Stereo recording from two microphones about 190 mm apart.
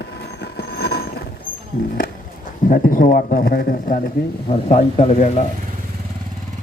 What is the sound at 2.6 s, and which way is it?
A man's voice, 45° left (ahead or behind).